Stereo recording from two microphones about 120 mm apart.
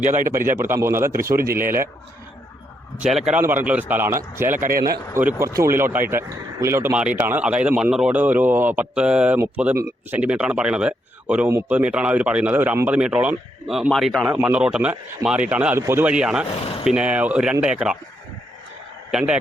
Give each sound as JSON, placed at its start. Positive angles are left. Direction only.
{"t": 0.0, "sound": "speech", "side_deg": -20}
{"t": 3.1, "sound": "a man's voice", "side_deg": 0}
{"t": 3.3, "sound": "speech", "side_deg": -15}
{"t": 6.9, "sound": "speech", "side_deg": -10}
{"t": 9.7, "sound": "speech", "side_deg": -25}
{"t": 10.2, "sound": "a man's voice", "side_deg": -10}
{"t": 14.3, "sound": "speech", "side_deg": -15}
{"t": 16.0, "sound": "speech", "side_deg": -5}
{"t": 19.1, "sound": "speech", "side_deg": -10}